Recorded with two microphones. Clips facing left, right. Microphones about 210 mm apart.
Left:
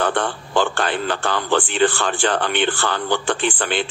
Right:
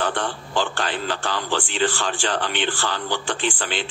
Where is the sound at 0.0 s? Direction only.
55° left (ahead or behind).